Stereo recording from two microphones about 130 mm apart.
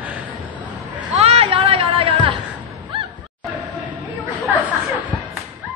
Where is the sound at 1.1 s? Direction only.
50° right (ahead or behind).